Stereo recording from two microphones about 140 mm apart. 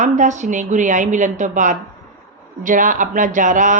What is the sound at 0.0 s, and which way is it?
Speech, 60° right (ahead or behind).